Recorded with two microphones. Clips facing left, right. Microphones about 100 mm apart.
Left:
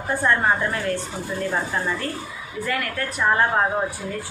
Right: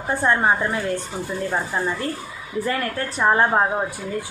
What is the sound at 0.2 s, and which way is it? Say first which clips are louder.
A woman's voice: right 1 dB; 20° right (ahead or behind).